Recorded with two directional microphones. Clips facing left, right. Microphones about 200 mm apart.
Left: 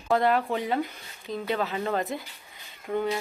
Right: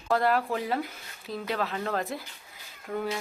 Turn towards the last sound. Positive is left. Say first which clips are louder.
# left 4 dB
turn(degrees=0)  # may be behind; listen again after turning